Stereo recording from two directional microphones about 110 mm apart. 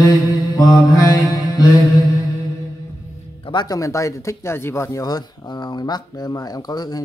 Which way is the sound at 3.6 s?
30° left (ahead or behind).